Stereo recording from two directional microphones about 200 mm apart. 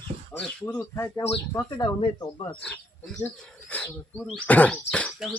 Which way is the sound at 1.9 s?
25° left (ahead or behind).